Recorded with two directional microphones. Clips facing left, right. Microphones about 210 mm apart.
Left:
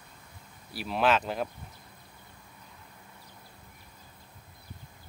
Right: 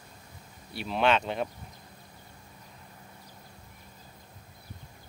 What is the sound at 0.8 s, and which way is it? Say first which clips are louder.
Speech: even; centre (ahead or behind).